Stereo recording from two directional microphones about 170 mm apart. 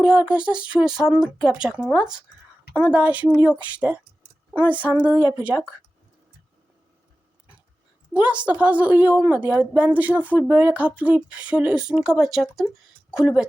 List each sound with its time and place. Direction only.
0.0 s speech: 5° right (ahead or behind)
8.1 s a woman's voice: 5° right (ahead or behind)